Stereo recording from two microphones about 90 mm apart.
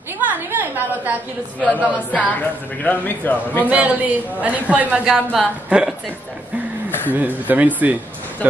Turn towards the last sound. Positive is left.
turn(degrees=-20)  # may be behind; listen again after turning